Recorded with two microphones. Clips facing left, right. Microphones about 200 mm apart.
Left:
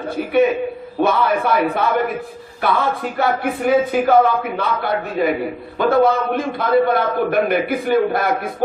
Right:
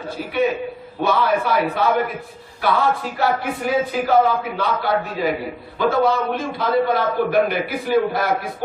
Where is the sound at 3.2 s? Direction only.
55° left (ahead or behind).